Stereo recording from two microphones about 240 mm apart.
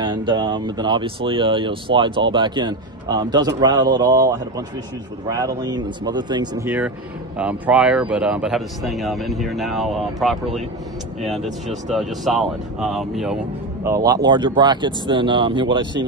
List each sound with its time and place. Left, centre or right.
0.0 s a man's voice: centre
13.8 s speech: centre